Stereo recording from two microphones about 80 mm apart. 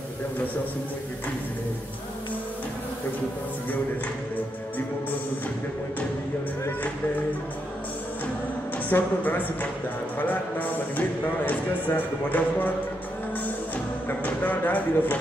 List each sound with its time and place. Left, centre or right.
8.8 s speech: left
14.0 s speech: left